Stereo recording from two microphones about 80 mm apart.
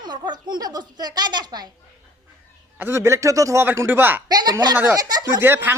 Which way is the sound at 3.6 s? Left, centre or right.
Right.